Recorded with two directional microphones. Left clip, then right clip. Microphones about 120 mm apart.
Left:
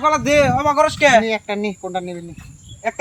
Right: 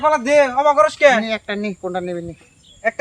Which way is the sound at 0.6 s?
20° right (ahead or behind).